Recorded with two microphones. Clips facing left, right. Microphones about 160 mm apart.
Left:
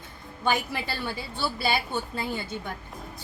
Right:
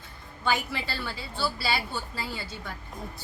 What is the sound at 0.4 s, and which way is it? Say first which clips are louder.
A woman's voice: left 2 dB; 15° left (ahead or behind).